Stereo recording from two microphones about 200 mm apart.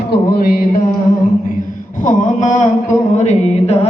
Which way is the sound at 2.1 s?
40° left (ahead or behind).